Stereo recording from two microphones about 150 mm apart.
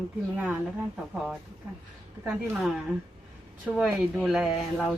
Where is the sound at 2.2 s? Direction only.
5° right (ahead or behind).